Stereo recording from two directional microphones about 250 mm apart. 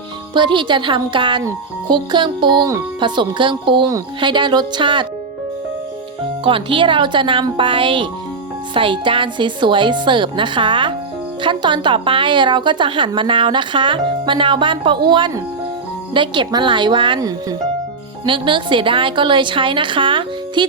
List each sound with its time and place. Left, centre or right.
0.3 s speech: centre
6.4 s speech: right